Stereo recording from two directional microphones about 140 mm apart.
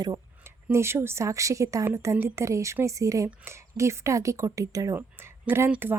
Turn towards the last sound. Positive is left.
turn(degrees=-15)  # may be behind; listen again after turning